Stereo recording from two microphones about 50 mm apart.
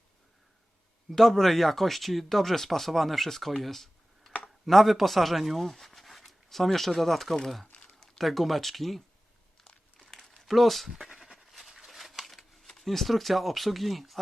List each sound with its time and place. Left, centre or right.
1.1 s speech: centre
10.0 s crumpling: centre
10.3 s a sound: centre
12.6 s speech: centre